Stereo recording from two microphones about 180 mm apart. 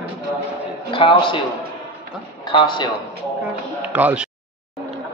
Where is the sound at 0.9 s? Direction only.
30° left (ahead or behind).